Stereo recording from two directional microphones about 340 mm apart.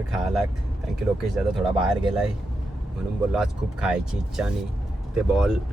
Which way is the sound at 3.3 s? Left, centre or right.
Centre.